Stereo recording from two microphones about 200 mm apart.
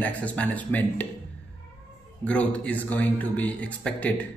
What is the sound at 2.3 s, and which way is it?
A man's voice, 5° left (ahead or behind).